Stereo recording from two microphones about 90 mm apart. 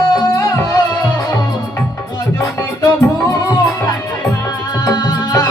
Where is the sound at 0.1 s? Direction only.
50° left (ahead or behind).